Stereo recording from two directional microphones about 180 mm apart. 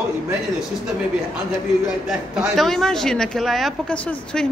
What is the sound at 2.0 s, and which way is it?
Speech, centre (ahead or behind).